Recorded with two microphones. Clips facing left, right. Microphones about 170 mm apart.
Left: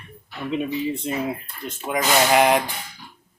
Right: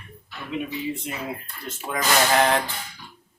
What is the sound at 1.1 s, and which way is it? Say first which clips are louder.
Speech: left 8 dB; 30° left (ahead or behind).